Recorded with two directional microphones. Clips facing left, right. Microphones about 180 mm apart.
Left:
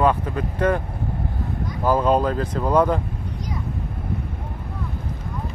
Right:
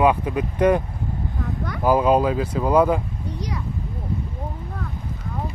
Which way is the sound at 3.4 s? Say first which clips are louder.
Right 1 dB; 75° right (ahead or behind).